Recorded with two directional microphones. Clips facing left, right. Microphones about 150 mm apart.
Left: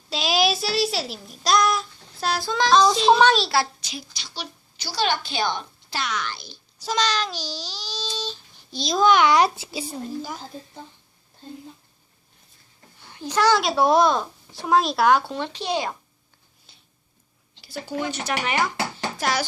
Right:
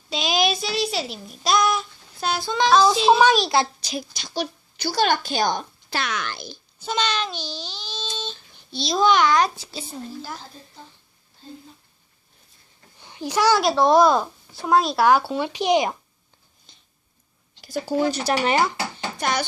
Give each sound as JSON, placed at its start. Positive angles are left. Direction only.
{"t": 0.1, "sound": "a sound", "side_deg": 0}
{"t": 3.8, "sound": "a woman's voice", "side_deg": -40}
{"t": 5.9, "sound": "speech", "side_deg": -55}
{"t": 6.8, "sound": "speech", "side_deg": 0}
{"t": 7.3, "sound": "baby cry", "side_deg": 40}
{"t": 7.8, "sound": "a sound", "side_deg": 40}
{"t": 8.8, "sound": "a child's voice", "side_deg": 0}
{"t": 13.0, "sound": "a sound", "side_deg": -15}
{"t": 13.6, "sound": "speech", "side_deg": 0}
{"t": 16.7, "sound": "a sound", "side_deg": 5}
{"t": 17.6, "sound": "speech", "side_deg": -40}
{"t": 19.1, "sound": "speech", "side_deg": 0}